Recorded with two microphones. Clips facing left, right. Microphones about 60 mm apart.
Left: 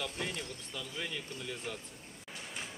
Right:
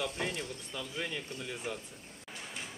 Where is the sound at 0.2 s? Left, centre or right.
Centre.